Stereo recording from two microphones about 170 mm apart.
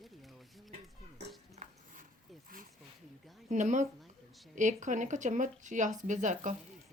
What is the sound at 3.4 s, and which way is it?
Speech, 45° right (ahead or behind).